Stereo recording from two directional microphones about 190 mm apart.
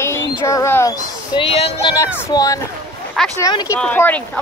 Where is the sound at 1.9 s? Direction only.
15° left (ahead or behind).